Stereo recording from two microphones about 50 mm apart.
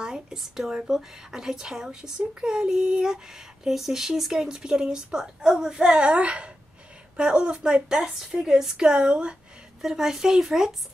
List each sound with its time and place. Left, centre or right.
0.0 s a sound: centre
0.4 s a woman's voice: centre
9.8 s speech: centre